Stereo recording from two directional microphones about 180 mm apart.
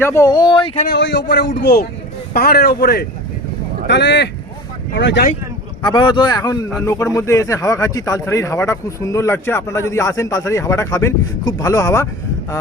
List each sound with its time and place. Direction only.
0.0 s speech: 15° left (ahead or behind)
0.9 s a man's voice: 75° left (ahead or behind)
3.8 s a man's voice: 75° left (ahead or behind)
5.8 s speech: 25° left (ahead or behind)